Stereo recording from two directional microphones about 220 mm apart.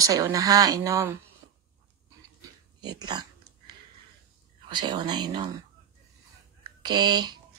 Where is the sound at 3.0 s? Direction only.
20° right (ahead or behind).